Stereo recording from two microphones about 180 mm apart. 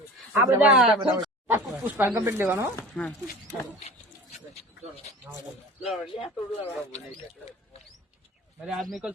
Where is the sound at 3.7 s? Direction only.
35° left (ahead or behind).